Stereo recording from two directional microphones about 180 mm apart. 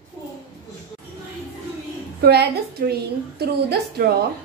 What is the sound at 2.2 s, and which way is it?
A woman's voice, 60° right (ahead or behind).